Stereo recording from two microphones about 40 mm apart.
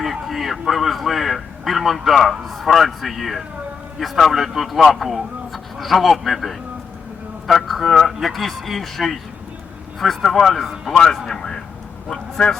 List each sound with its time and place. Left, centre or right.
0.0 s a man's voice: centre
10.2 s a man's voice: centre
10.9 s a man's voice: centre